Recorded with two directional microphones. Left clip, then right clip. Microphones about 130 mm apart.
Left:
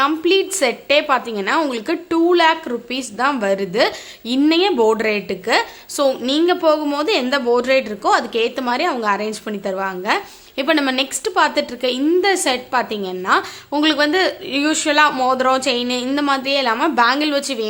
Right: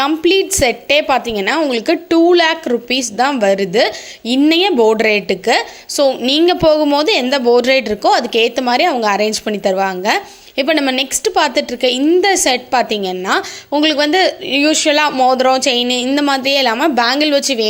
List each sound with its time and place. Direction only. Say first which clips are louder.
0.0 s speech: right 3 dB; 30° right (ahead or behind)
6.2 s a woman's voice: right 5 dB; 35° right (ahead or behind)